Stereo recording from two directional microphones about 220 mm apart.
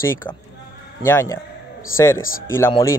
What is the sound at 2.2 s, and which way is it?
Speech, 40° left (ahead or behind).